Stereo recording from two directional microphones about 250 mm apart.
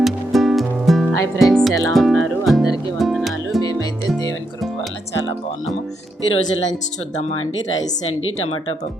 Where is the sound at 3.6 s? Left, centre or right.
Centre.